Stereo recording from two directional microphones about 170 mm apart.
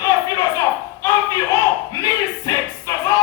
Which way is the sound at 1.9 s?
20° left (ahead or behind).